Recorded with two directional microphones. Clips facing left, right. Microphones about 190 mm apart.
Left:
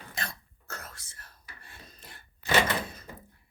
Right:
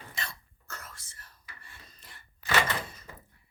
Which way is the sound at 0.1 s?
40° left (ahead or behind).